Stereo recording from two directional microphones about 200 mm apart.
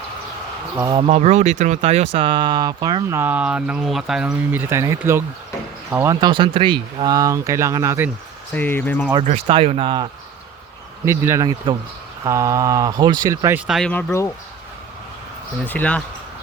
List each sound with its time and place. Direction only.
0.8 s speech: 20° right (ahead or behind)
8.5 s speech: 10° left (ahead or behind)
9.2 s speech: 30° right (ahead or behind); by 13.6 s 15° right (ahead or behind)
13.7 s speech: centre (ahead or behind)
15.6 s speech: 10° left (ahead or behind)